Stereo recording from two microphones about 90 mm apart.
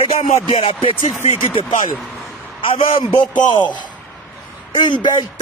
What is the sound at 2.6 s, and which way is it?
Speech, 75° left (ahead or behind).